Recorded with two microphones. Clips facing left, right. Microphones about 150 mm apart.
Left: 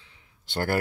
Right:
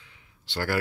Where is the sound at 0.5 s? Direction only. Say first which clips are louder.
Left 2 dB; 45° left (ahead or behind).